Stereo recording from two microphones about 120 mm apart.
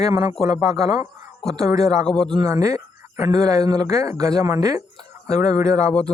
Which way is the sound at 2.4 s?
25° right (ahead or behind).